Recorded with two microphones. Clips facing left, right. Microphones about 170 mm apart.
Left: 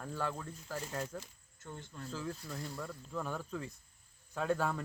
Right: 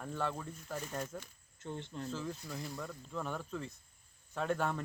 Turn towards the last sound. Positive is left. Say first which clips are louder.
# left 1 dB
turn(degrees=5)  # may be behind; listen again after turning